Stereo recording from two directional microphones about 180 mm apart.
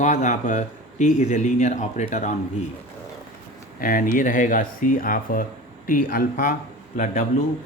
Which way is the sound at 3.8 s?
50° left (ahead or behind).